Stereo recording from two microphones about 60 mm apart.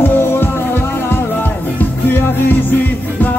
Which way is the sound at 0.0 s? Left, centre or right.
Left.